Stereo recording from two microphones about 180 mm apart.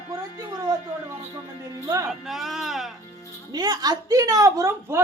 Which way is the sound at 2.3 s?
Centre (ahead or behind).